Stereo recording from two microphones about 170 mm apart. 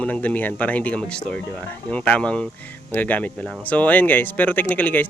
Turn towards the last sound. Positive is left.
turn(degrees=10)  # may be behind; listen again after turning